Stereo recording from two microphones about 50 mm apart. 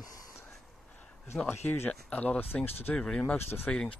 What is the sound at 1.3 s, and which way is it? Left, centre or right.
Speech, centre.